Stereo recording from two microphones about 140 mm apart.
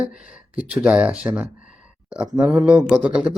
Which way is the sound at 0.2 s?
70° left (ahead or behind).